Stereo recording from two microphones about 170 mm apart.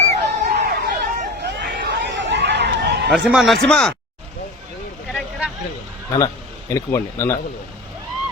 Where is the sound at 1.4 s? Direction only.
75° right (ahead or behind).